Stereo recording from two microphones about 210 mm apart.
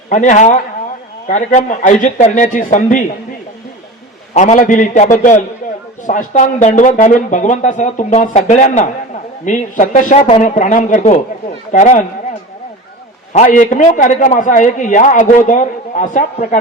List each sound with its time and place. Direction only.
0.1 s a man's voice: 35° left (ahead or behind)
4.4 s a man's voice: 35° left (ahead or behind)
13.3 s a man's voice: 35° left (ahead or behind)